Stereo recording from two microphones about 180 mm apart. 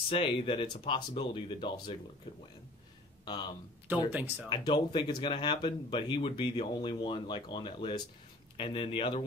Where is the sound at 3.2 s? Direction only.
25° left (ahead or behind).